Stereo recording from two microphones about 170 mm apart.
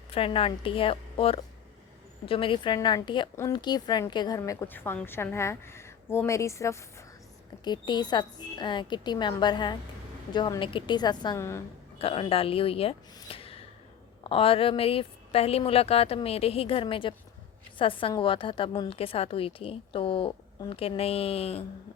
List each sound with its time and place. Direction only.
0.1 s a woman's voice: 30° left (ahead or behind); by 11.6 s 15° left (ahead or behind)
11.9 s a woman's voice: 35° left (ahead or behind)
13.1 s a sound: 35° left (ahead or behind)
14.3 s a woman's voice: 35° left (ahead or behind)